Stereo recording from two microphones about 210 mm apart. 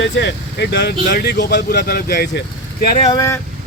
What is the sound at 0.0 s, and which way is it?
Speech, 55° left (ahead or behind).